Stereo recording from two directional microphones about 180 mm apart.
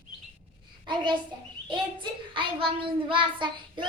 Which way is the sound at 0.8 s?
25° right (ahead or behind).